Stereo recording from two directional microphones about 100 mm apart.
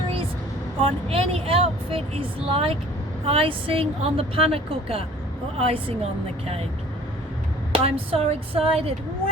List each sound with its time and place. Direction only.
0.8 s speech: 70° right (ahead or behind)
5.5 s speech: 85° right
7.7 s speech: 70° right (ahead or behind)